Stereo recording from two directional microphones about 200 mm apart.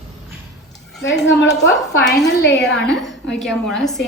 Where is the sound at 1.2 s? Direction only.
60° left (ahead or behind).